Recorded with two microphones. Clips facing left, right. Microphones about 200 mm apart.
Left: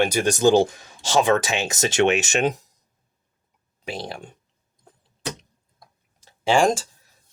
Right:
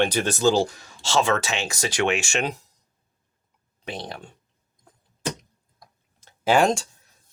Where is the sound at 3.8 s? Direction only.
10° left (ahead or behind).